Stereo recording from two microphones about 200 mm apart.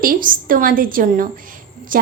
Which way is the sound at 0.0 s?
45° right (ahead or behind).